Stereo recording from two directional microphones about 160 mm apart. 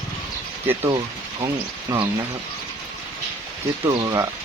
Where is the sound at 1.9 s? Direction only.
20° right (ahead or behind).